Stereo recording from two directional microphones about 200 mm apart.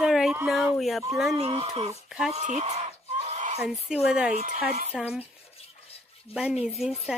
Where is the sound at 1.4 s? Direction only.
30° right (ahead or behind).